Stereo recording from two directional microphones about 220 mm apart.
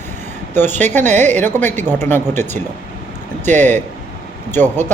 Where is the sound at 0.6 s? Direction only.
30° right (ahead or behind).